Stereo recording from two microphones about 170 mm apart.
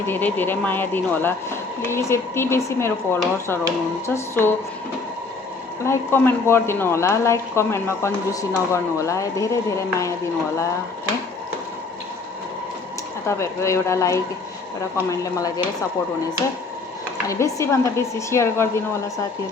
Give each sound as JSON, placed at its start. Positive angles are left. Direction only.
{"t": 0.1, "sound": "speech", "side_deg": 10}
{"t": 5.8, "sound": "speech", "side_deg": 15}
{"t": 13.2, "sound": "speech", "side_deg": 15}
{"t": 17.2, "sound": "speech", "side_deg": 15}